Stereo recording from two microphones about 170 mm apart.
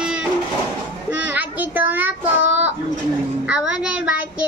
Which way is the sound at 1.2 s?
10° right (ahead or behind).